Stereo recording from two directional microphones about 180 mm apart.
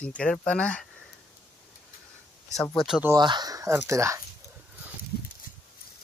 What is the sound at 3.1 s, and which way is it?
Speech, 25° right (ahead or behind).